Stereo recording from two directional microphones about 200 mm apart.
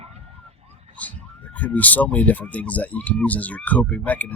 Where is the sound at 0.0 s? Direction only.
30° right (ahead or behind).